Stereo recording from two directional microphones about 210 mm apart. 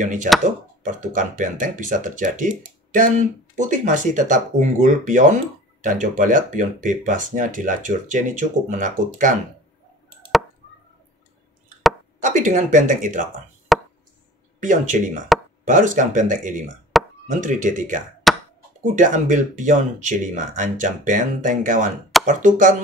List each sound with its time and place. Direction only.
0.0 s speech: 35° right (ahead or behind)
12.2 s speech: 35° right (ahead or behind)
13.7 s chop: centre (ahead or behind)
14.6 s speech: 35° right (ahead or behind)
16.9 s plop: centre (ahead or behind)
17.4 s speech: 40° right (ahead or behind)
18.3 s a sound: centre (ahead or behind)
18.9 s speech: 35° right (ahead or behind)